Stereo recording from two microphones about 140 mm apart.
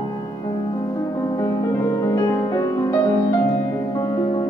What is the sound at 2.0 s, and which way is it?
Music, 25° left (ahead or behind).